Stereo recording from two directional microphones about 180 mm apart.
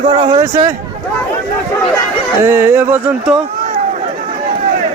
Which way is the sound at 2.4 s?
15° right (ahead or behind).